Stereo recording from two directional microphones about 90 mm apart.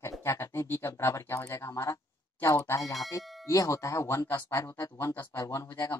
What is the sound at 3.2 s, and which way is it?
Music, centre (ahead or behind).